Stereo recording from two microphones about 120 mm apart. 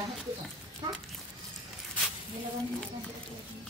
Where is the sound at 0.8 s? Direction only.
35° right (ahead or behind).